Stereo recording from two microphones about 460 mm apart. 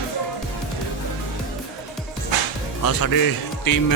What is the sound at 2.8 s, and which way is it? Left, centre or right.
Speech, left.